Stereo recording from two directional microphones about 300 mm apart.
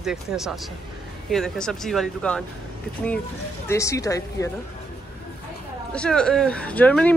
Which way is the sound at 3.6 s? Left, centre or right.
Centre.